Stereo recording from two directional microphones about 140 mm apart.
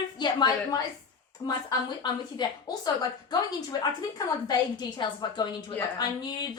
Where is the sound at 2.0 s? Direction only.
30° left (ahead or behind).